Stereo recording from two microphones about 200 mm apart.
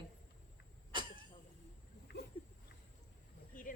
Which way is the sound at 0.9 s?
25° right (ahead or behind).